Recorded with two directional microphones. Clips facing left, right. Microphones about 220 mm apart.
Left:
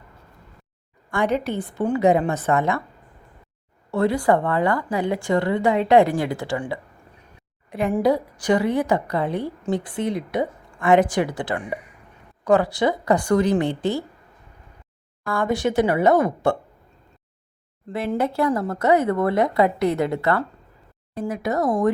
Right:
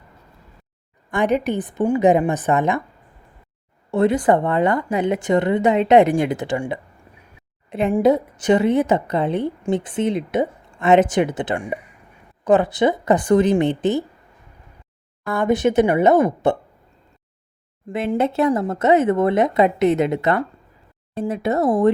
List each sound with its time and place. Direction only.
1.1 s a woman's voice: 20° right (ahead or behind)
3.9 s a woman's voice: 20° right (ahead or behind)
15.2 s a woman's voice: 20° right (ahead or behind)
17.8 s a woman's voice: 15° right (ahead or behind)